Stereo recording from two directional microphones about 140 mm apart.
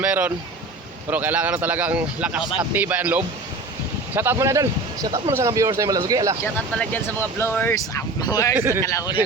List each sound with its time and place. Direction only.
0.0 s speech: 10° right (ahead or behind)
6.4 s speech: 15° left (ahead or behind)
8.5 s speech: 15° right (ahead or behind)
8.8 s speech: 25° left (ahead or behind)